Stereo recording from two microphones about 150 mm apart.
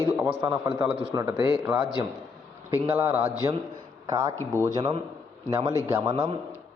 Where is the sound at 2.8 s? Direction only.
15° right (ahead or behind).